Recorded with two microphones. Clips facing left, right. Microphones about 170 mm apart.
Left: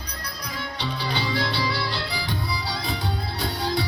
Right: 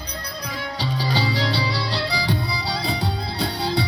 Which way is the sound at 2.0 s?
80° right.